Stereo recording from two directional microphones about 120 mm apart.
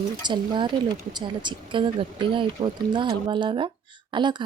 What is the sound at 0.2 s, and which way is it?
Speech, 40° right (ahead or behind).